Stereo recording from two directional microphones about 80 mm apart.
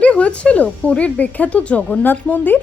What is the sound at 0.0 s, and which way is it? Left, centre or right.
A woman's voice, centre.